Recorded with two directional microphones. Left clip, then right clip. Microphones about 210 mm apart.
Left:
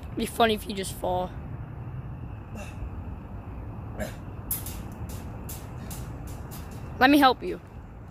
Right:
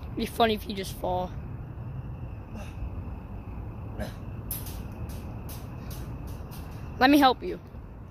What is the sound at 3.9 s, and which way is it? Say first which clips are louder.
Vehicle: left 3 dB; centre (ahead or behind).